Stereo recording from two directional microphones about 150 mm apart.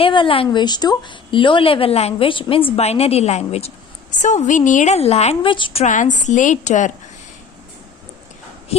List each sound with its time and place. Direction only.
0.0 s a woman's voice: 35° left (ahead or behind)
5.8 s a woman's voice: 55° left (ahead or behind)